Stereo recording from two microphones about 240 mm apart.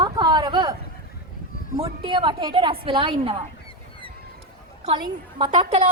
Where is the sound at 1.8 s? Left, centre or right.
Right.